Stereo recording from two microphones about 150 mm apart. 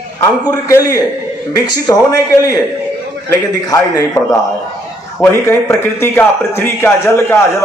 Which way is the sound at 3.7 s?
20° left (ahead or behind).